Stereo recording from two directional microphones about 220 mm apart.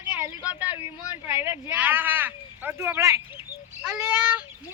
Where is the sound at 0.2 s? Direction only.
10° right (ahead or behind).